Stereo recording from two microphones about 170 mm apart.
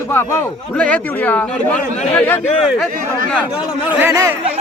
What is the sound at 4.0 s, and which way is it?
Speech, 20° right (ahead or behind).